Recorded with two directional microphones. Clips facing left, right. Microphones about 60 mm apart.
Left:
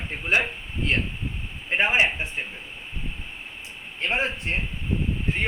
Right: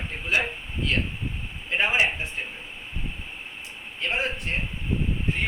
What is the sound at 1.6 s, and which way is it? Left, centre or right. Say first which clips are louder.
Speech: left 2 dB; left.